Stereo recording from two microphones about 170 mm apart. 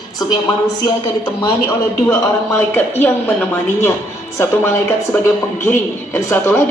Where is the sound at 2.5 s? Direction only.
10° left (ahead or behind).